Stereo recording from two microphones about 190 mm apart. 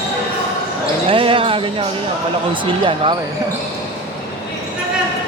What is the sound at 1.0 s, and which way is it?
Basketball bounce, 30° right (ahead or behind).